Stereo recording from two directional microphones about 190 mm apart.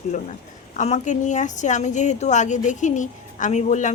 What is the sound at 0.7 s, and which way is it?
A woman's voice, 40° left (ahead or behind).